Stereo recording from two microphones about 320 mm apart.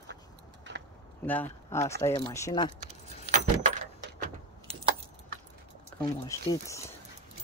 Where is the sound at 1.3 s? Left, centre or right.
Centre.